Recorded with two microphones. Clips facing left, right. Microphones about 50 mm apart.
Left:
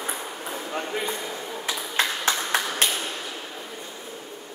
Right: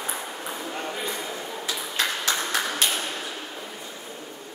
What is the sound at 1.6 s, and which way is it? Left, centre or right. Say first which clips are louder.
Ping: left 2 dB; left.